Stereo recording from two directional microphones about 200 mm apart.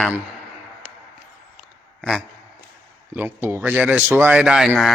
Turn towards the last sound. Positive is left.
turn(degrees=0)  # may be behind; listen again after turning